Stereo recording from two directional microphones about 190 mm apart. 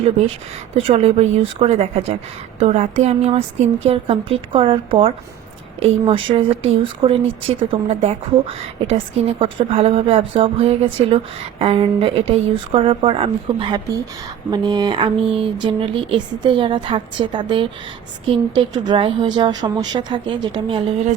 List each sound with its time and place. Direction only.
0.8 s a woman's voice: 35° right (ahead or behind)